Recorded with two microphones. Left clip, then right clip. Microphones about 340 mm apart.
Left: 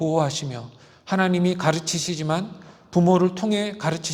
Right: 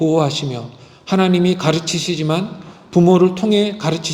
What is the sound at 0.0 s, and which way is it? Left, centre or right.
Speech, left.